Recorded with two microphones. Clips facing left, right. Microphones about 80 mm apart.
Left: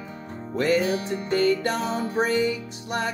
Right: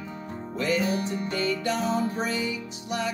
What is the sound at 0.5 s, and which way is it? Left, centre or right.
Music, left.